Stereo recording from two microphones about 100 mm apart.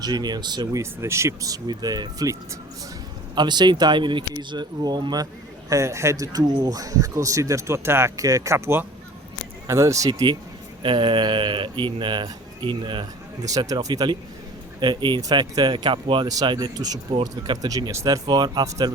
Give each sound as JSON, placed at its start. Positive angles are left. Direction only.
{"t": 0.0, "sound": "speech", "side_deg": -45}
{"t": 0.7, "sound": "speech", "side_deg": -30}
{"t": 3.3, "sound": "speech", "side_deg": -45}
{"t": 10.1, "sound": "speech", "side_deg": -45}
{"t": 10.8, "sound": "speech", "side_deg": -60}
{"t": 13.4, "sound": "speech", "side_deg": -35}
{"t": 14.8, "sound": "speech", "side_deg": -50}
{"t": 15.2, "sound": "speech", "side_deg": -40}
{"t": 16.3, "sound": "speech", "side_deg": -40}